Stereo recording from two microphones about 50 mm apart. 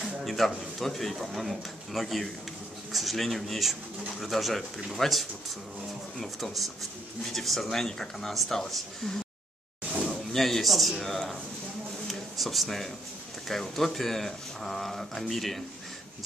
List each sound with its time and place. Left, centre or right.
0.2 s a man's voice: centre
10.0 s speech: centre
12.1 s a sound: centre
13.5 s speech: centre